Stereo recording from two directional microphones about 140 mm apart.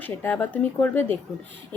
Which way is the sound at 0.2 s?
10° left (ahead or behind).